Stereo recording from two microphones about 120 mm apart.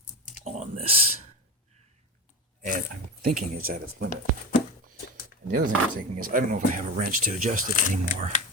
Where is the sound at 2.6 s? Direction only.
90° right.